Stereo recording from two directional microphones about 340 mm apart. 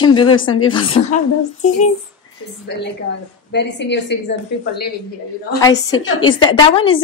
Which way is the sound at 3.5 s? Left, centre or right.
Left.